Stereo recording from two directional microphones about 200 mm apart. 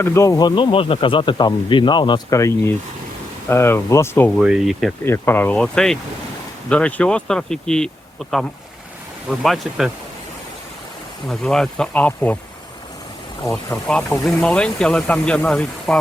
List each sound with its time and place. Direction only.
0.0 s speech: 15° left (ahead or behind)
4.4 s speech: centre (ahead or behind)
5.0 s speech: 10° left (ahead or behind)
11.3 s speech: 5° left (ahead or behind)
13.5 s speech: 10° left (ahead or behind)